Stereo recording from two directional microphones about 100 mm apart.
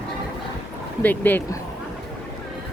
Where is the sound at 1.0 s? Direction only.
20° left (ahead or behind).